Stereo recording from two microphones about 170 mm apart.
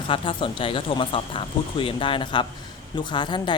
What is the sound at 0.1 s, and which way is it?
Speech, 30° left (ahead or behind).